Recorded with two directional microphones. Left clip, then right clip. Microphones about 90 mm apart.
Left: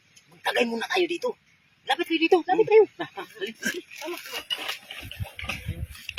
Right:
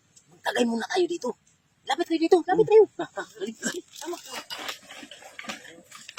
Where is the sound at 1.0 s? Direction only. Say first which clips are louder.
Left 1 dB; 30° right (ahead or behind).